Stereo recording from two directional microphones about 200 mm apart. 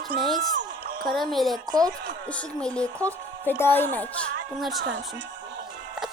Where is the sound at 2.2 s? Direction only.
5° left (ahead or behind).